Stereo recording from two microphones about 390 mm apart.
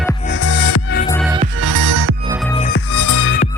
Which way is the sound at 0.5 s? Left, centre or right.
Left.